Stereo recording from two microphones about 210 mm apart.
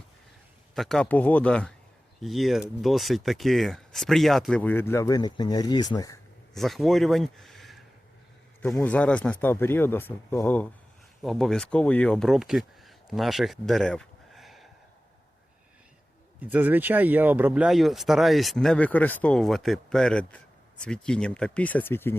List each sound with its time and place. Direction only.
0.8 s speech: 5° left (ahead or behind)
6.5 s speech: centre (ahead or behind)
16.4 s speech: 10° right (ahead or behind); by 22.1 s 10° left (ahead or behind)